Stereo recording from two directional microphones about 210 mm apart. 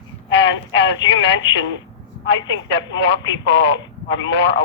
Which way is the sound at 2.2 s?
60° left (ahead or behind).